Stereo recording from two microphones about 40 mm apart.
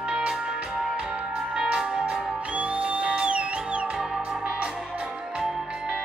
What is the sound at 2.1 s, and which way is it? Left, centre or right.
Music, right.